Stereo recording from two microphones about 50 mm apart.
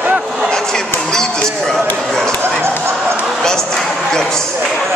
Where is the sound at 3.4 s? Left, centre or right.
Centre.